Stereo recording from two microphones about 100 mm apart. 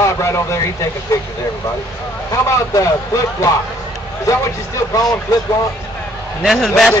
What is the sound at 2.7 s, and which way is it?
Speech, 30° left (ahead or behind).